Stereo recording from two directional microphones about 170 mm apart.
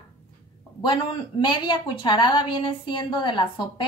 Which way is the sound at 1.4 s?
25° left (ahead or behind).